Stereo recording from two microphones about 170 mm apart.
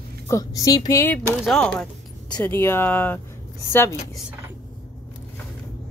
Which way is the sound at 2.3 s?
15° left (ahead or behind).